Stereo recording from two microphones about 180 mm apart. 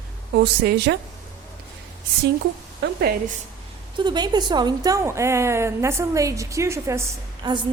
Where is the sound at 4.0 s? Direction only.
25° right (ahead or behind).